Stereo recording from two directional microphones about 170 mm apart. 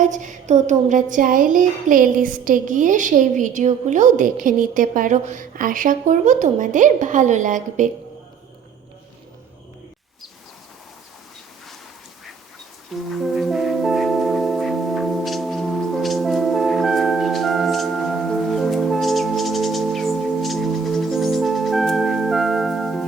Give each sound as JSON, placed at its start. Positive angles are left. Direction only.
{"t": 0.0, "sound": "music", "side_deg": -45}
{"t": 13.1, "sound": "music", "side_deg": 0}